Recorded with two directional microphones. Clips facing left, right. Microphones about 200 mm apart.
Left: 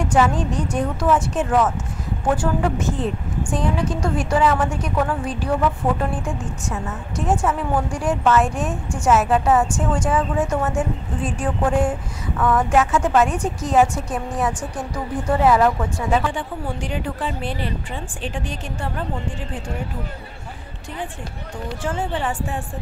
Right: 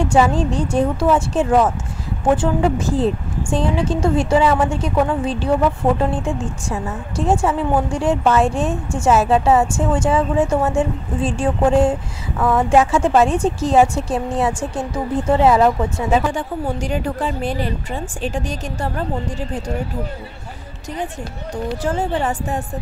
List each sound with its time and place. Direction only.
0.3 s a woman's voice: 30° right (ahead or behind)
16.2 s a woman's voice: 45° right (ahead or behind)
21.8 s a woman's voice: 40° right (ahead or behind)